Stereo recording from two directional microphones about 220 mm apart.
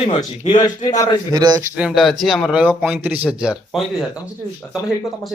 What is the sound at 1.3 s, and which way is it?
Speech, 20° right (ahead or behind).